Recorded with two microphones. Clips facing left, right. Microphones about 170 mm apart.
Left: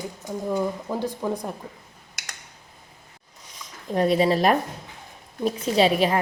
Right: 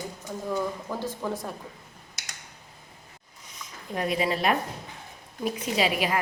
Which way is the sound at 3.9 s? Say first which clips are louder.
Left 7 dB; 35° left (ahead or behind).